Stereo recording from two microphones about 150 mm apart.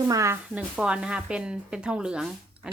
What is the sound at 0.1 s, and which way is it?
Speech, 20° right (ahead or behind).